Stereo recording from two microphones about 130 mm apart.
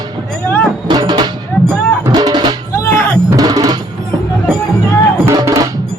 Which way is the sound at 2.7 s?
20° left (ahead or behind).